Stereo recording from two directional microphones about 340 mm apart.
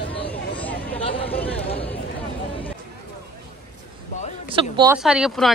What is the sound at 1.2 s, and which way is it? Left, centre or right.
Chatter, centre.